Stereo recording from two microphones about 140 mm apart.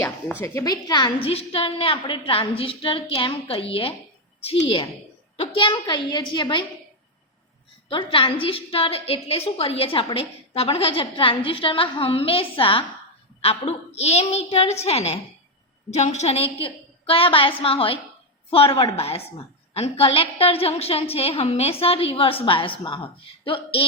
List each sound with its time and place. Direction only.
0.3 s speech: 15° left (ahead or behind)
0.6 s a woman's voice: 30° left (ahead or behind)
7.9 s a woman's voice: 40° left (ahead or behind)